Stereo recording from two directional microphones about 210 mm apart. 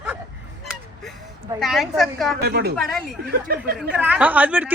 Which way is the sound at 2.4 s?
50° right (ahead or behind).